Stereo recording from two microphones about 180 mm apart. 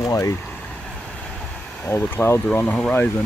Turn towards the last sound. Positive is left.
turn(degrees=5)  # may be behind; listen again after turning